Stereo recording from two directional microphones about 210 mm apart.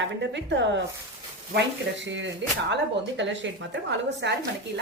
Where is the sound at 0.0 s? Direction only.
60° right (ahead or behind).